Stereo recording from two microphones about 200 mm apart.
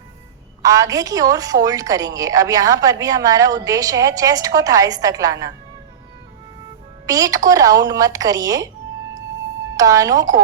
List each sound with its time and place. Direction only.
0.6 s a woman's voice: 15° right (ahead or behind)
7.1 s a woman's voice: 15° right (ahead or behind)
9.7 s a woman's voice: 15° right (ahead or behind)